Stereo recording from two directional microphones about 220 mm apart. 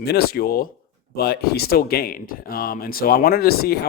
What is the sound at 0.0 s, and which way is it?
Speech, 45° left (ahead or behind).